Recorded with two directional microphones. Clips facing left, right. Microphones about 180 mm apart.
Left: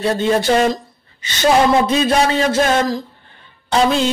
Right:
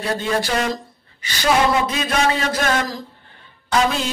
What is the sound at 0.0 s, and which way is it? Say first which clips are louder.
Child singing: left 6 dB; 25° left (ahead or behind).